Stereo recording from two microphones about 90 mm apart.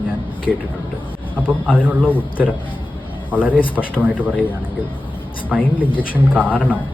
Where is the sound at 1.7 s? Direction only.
15° right (ahead or behind).